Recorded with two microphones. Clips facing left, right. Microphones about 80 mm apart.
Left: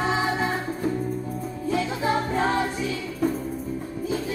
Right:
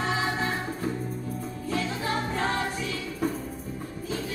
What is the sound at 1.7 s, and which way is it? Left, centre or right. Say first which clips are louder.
Music: left 5 dB; centre.